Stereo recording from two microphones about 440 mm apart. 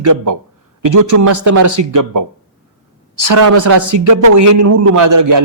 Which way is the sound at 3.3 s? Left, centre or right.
Right.